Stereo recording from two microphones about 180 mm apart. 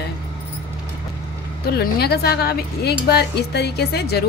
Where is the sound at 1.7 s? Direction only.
60° left (ahead or behind).